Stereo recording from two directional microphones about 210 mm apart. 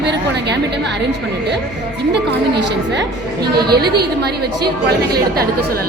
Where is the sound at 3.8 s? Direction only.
50° right (ahead or behind).